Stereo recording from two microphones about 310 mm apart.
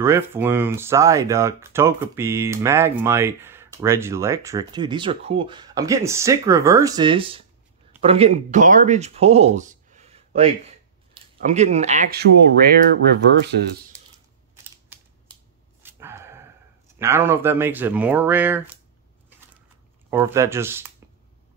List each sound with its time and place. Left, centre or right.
0.0 s speech: centre; by 13.8 s right
15.8 s dog: centre
17.0 s speech: centre
20.1 s speech: centre